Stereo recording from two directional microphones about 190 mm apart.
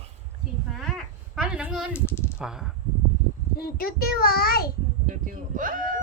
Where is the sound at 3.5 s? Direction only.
50° left (ahead or behind).